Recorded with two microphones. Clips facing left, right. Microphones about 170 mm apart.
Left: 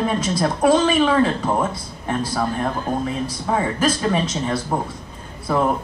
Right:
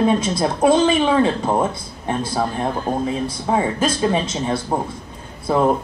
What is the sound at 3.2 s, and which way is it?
A man's voice, 25° right (ahead or behind).